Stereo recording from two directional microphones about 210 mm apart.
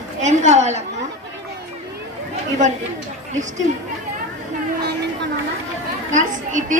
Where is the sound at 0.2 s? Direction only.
35° right (ahead or behind).